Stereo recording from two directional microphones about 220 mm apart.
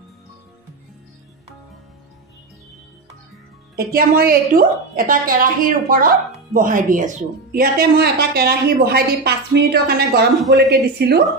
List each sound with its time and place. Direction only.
3.7 s a woman's voice: 45° right (ahead or behind)